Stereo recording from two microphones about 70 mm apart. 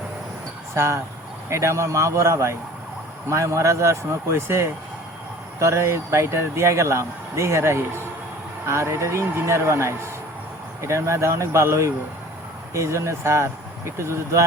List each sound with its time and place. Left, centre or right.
0.7 s speech: right